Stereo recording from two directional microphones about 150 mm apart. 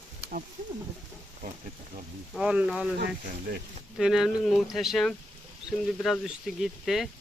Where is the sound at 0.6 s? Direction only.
60° right (ahead or behind).